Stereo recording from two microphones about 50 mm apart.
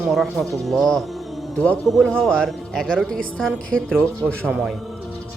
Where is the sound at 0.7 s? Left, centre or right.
Centre.